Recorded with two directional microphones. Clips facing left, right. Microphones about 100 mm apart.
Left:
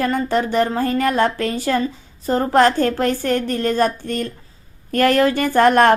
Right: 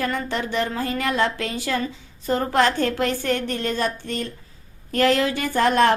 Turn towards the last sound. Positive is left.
turn(degrees=55)  # may be behind; listen again after turning